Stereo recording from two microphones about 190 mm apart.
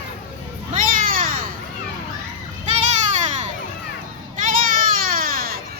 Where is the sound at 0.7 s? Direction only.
45° right (ahead or behind).